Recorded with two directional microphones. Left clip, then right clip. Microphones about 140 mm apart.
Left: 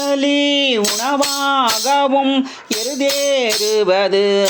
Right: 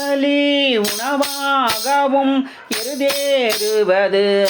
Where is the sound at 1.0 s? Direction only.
45° left (ahead or behind).